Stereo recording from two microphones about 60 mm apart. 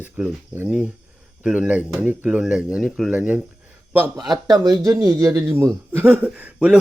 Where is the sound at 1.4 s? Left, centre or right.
Centre.